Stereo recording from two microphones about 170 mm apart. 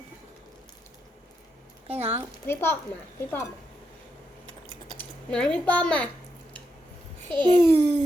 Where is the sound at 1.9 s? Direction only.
35° right (ahead or behind).